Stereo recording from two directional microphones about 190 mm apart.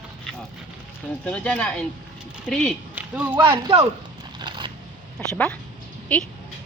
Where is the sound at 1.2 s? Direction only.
5° left (ahead or behind).